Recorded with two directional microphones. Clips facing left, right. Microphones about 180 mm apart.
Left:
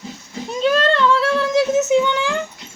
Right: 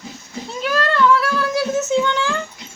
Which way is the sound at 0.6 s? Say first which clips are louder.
Left 2 dB; 25° left (ahead or behind).